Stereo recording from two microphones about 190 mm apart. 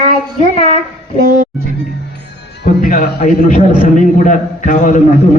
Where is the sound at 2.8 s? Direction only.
45° left (ahead or behind).